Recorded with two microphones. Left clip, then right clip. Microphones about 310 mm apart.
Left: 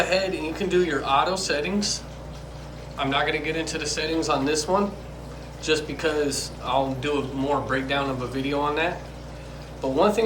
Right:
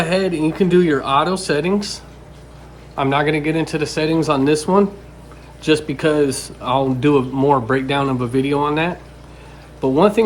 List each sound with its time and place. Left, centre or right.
0.0 s a man's voice: centre
3.0 s a man's voice: centre
10.0 s speech: centre